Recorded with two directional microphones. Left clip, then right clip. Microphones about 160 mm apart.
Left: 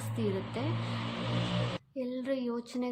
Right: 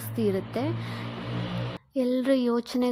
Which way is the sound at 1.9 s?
50° right (ahead or behind).